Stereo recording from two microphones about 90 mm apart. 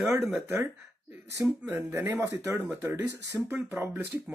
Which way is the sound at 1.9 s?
25° right (ahead or behind).